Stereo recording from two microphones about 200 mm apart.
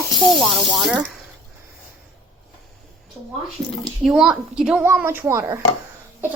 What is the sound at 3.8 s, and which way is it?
A woman's voice, centre (ahead or behind).